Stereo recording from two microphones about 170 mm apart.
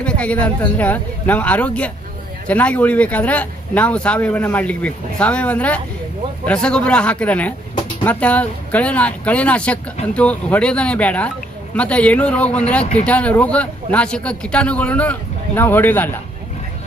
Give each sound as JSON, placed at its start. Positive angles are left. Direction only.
{"t": 0.0, "sound": "speech", "side_deg": 5}
{"t": 12.8, "sound": "speech", "side_deg": 40}
{"t": 13.1, "sound": "speech", "side_deg": 10}